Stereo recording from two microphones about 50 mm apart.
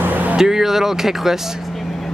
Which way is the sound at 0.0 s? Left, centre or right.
Right.